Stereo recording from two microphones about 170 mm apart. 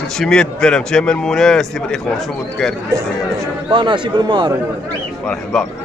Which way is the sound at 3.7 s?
30° right (ahead or behind).